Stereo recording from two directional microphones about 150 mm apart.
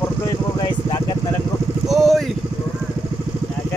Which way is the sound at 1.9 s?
Centre (ahead or behind).